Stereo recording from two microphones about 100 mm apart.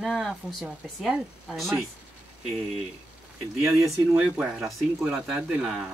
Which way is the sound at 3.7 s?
30° right (ahead or behind).